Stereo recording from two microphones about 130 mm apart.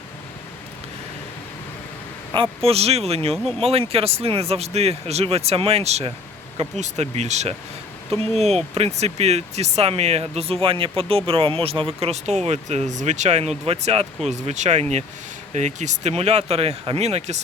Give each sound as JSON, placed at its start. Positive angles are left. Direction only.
{"t": 2.6, "sound": "speech", "side_deg": -50}